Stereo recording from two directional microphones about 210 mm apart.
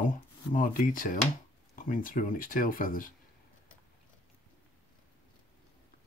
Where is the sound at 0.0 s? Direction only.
40° left (ahead or behind).